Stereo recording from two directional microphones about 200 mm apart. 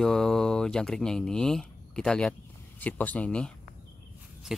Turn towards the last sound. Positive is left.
turn(degrees=-5)  # may be behind; listen again after turning